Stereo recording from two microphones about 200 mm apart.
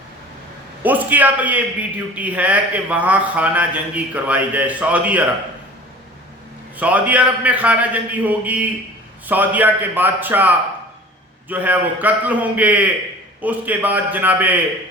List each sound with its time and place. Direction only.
0.8 s speech: 10° right (ahead or behind)
6.7 s speech: 5° right (ahead or behind)